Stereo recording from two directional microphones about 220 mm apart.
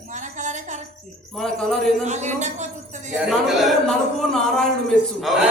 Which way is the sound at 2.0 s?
30° right (ahead or behind).